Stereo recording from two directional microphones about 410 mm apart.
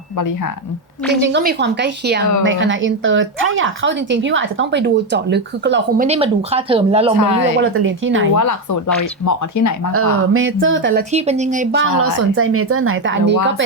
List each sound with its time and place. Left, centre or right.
0.2 s speech: left
1.2 s speech: right
7.2 s speech: left
7.6 s speech: right
8.4 s speech: left
9.9 s speech: right
11.1 s speech: centre
12.0 s speech: right